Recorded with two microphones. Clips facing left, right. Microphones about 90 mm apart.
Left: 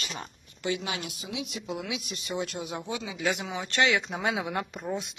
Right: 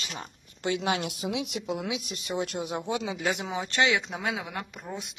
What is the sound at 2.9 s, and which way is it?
Speech, 55° right (ahead or behind).